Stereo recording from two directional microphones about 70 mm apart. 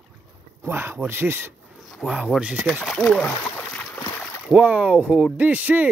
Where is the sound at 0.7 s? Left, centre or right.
Right.